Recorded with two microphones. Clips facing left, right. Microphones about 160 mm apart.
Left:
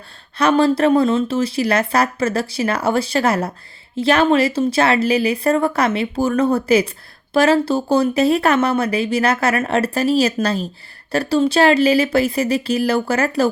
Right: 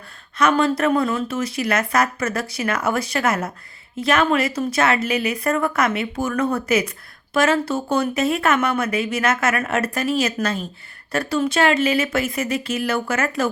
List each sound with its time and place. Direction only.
0.3 s speech: 30° left (ahead or behind)